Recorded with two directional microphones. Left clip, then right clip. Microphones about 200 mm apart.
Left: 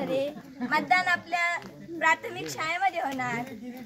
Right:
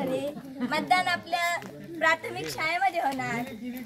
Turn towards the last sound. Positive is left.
turn(degrees=0)  # may be behind; listen again after turning